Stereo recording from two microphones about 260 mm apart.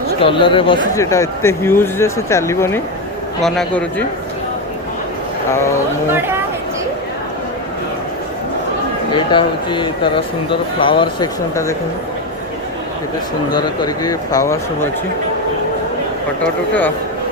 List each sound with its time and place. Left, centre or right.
0.2 s speech: centre
9.1 s speech: centre
13.5 s speech: centre